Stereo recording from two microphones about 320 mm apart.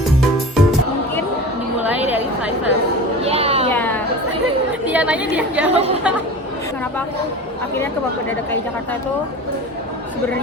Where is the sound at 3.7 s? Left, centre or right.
Centre.